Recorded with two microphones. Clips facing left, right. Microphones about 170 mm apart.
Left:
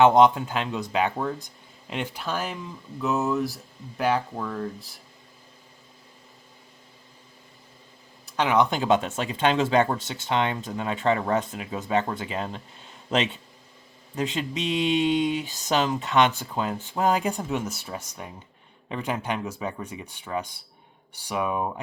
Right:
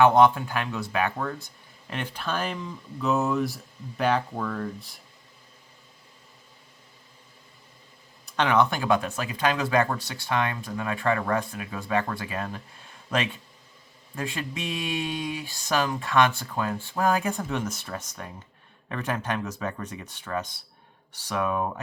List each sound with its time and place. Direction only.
0.0 s speech: 20° left (ahead or behind); by 4.9 s 5° left (ahead or behind)
8.4 s speech: 10° left (ahead or behind)